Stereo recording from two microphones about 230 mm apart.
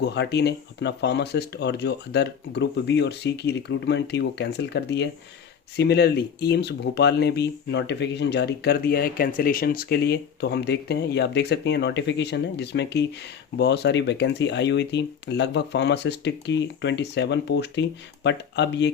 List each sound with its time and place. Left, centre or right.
0.0 s speech: left